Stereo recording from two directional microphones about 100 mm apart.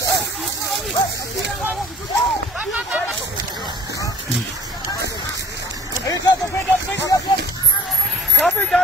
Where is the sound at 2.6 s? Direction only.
10° right (ahead or behind).